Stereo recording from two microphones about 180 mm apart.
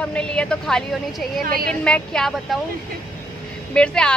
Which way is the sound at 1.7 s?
5° left (ahead or behind).